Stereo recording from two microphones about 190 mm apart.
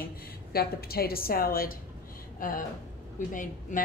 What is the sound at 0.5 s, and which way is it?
A woman's voice, 55° left (ahead or behind).